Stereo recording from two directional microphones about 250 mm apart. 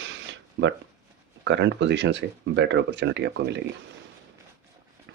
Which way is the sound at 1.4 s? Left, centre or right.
Right.